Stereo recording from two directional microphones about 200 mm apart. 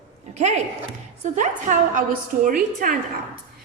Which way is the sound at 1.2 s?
35° right (ahead or behind).